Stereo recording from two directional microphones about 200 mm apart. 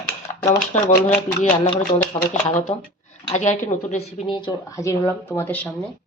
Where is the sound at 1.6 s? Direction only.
35° left (ahead or behind); by 5.7 s 10° left (ahead or behind).